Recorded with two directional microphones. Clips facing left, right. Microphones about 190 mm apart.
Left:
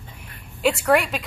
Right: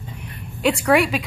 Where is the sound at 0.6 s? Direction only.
Centre (ahead or behind).